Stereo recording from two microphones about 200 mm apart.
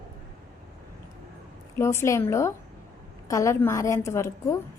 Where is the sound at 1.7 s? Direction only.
15° left (ahead or behind).